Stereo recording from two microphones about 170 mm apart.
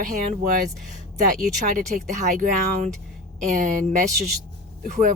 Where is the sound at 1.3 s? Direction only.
45° right (ahead or behind).